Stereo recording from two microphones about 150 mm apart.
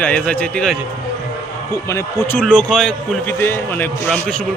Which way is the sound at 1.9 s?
15° left (ahead or behind).